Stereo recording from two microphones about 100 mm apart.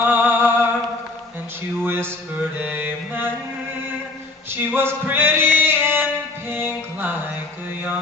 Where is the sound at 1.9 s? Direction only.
20° right (ahead or behind).